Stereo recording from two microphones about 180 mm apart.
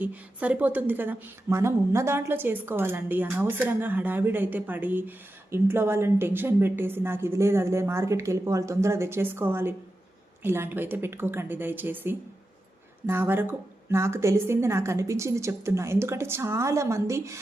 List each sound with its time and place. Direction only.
0.0 s a woman's voice: 10° right (ahead or behind)